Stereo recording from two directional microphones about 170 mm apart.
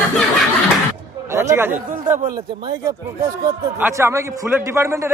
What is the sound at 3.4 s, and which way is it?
A man's voice, 15° right (ahead or behind).